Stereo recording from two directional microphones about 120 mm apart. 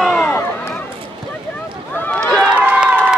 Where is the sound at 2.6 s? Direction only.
10° right (ahead or behind).